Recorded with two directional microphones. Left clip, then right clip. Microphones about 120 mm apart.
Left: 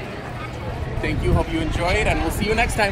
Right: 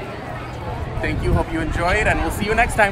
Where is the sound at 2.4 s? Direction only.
25° right (ahead or behind).